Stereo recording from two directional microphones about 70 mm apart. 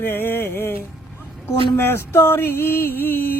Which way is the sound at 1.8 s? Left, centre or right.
Left.